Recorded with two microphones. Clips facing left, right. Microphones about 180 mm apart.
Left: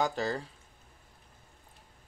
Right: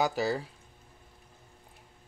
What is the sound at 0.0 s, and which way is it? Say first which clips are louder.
Speech: right 2 dB; 10° right (ahead or behind).